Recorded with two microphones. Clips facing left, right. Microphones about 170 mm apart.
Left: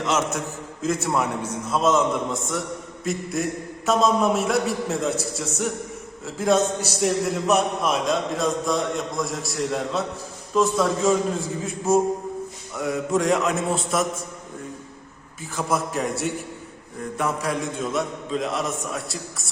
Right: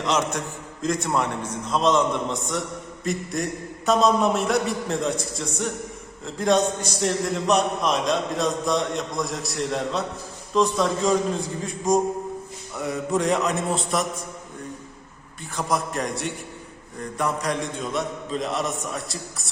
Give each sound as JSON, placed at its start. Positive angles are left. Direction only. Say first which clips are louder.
{"t": 0.0, "sound": "a man's voice", "louder": "even", "side_deg": 5}
{"t": 15.5, "sound": "a man's voice", "louder": "left 1 dB", "side_deg": 5}